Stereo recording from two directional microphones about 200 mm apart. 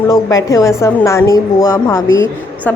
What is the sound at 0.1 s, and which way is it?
A woman's voice, 15° left (ahead or behind).